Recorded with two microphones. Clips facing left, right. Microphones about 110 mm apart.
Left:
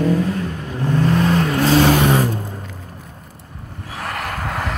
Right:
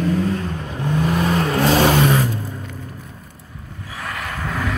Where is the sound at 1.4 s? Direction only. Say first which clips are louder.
Even; 15° right (ahead or behind).